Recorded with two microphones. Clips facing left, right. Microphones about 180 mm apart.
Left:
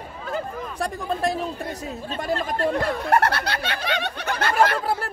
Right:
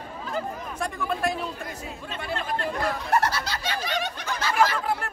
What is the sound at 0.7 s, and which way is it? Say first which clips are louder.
Speech: left 3 dB; 35° left (ahead or behind).